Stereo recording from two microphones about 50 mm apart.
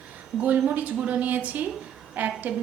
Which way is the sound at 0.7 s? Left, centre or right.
Right.